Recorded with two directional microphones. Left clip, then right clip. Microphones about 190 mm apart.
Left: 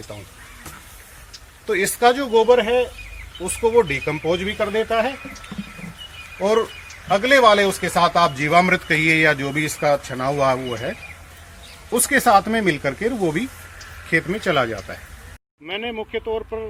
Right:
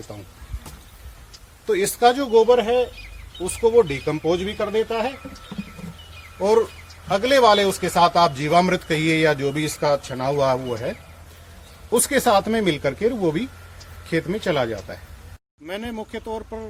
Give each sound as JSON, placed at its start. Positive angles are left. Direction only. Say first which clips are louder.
{"t": 1.6, "sound": "speech", "louder": "left 1 dB", "side_deg": -55}
{"t": 7.1, "sound": "speech", "louder": "left 2 dB", "side_deg": -40}
{"t": 11.9, "sound": "speech", "louder": "left 3 dB", "side_deg": -40}
{"t": 15.6, "sound": "speech", "louder": "left 4 dB", "side_deg": -25}